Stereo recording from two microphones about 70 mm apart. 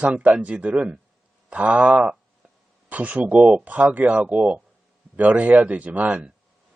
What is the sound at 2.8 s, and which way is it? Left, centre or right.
Speech, right.